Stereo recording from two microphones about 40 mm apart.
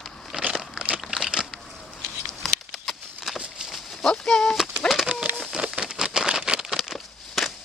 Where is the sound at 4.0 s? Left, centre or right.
Centre.